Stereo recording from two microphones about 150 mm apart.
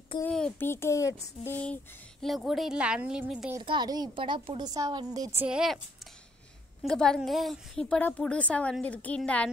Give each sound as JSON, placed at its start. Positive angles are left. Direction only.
{"t": 0.2, "sound": "a child's voice", "side_deg": 10}
{"t": 2.2, "sound": "a woman's voice", "side_deg": 0}
{"t": 3.6, "sound": "a woman's voice", "side_deg": -30}
{"t": 5.4, "sound": "a woman's voice", "side_deg": -5}
{"t": 6.8, "sound": "a woman's voice", "side_deg": 5}